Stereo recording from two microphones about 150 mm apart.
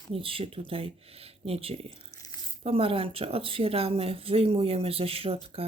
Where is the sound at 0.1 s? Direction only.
35° right (ahead or behind).